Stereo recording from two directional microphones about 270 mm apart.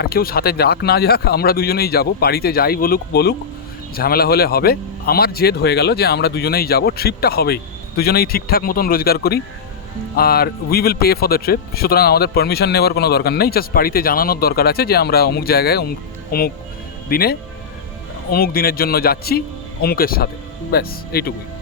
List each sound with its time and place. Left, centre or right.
0.0 s speech: left